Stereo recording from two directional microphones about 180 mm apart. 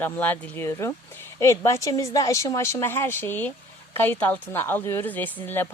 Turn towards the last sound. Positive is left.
turn(degrees=10)  # may be behind; listen again after turning